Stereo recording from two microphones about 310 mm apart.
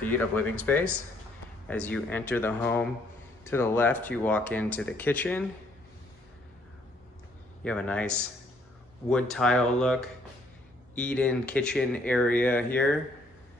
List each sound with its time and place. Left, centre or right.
0.0 s speech: centre
7.6 s speech: centre
9.1 s speech: centre